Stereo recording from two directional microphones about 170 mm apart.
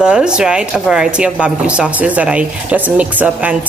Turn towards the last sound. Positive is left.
turn(degrees=-10)  # may be behind; listen again after turning